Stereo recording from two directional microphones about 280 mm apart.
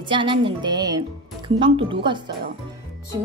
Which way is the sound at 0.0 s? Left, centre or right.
Centre.